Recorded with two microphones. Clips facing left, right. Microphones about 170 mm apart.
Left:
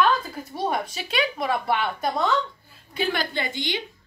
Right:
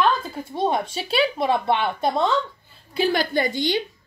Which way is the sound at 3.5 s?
20° left (ahead or behind).